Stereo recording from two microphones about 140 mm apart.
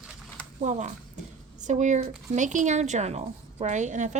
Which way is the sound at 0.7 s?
60° right (ahead or behind).